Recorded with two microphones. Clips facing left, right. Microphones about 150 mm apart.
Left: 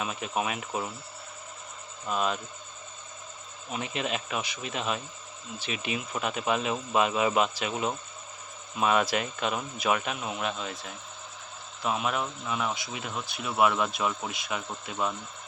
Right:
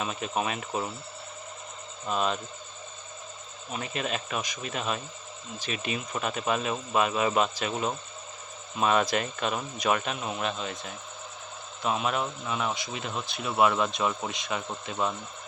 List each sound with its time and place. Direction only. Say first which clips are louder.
0.0 s speech: right 1 dB; 5° left (ahead or behind)
2.0 s speech: right 1 dB; 5° left (ahead or behind)
3.7 s speech: even; 15° left (ahead or behind)